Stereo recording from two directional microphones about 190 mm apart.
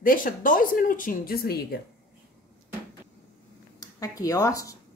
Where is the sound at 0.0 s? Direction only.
45° left (ahead or behind).